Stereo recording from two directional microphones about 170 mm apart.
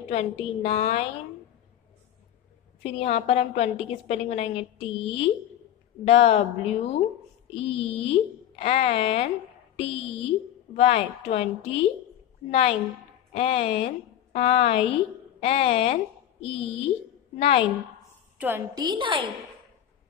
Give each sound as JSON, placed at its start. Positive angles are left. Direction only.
{"t": 0.1, "sound": "a woman's voice", "side_deg": 35}
{"t": 2.8, "sound": "a woman's voice", "side_deg": 40}
{"t": 18.4, "sound": "a woman's voice", "side_deg": -10}
{"t": 18.8, "sound": "a woman's voice", "side_deg": -25}